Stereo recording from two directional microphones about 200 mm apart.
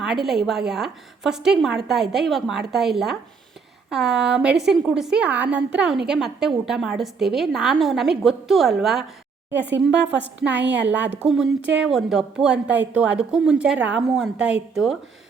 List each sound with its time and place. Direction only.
0.0 s a woman's voice: centre (ahead or behind)
10.5 s a woman's voice: 60° right (ahead or behind)
10.8 s a woman's voice: 10° right (ahead or behind)